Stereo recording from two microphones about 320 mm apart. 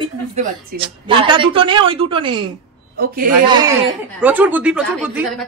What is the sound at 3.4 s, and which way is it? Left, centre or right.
A woman's voice, centre.